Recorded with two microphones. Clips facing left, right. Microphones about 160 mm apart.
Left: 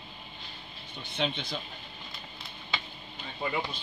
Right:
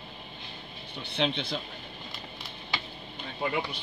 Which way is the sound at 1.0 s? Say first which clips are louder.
Right 3 dB; 65° right (ahead or behind).